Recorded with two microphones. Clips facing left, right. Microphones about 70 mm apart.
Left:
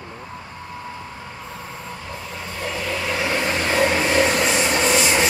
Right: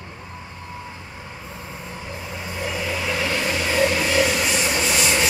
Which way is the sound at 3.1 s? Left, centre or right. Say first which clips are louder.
Left 2 dB; centre.